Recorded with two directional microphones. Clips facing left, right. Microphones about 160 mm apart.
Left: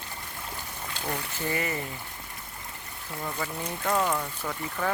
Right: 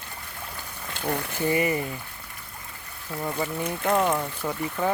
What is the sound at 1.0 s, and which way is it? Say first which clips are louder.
Speech: right 6 dB; 50° right (ahead or behind).